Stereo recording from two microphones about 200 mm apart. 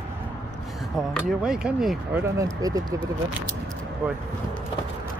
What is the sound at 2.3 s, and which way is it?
Speech, 15° right (ahead or behind).